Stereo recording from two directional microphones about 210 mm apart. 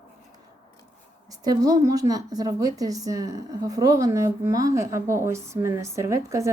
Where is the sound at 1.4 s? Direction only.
15° right (ahead or behind).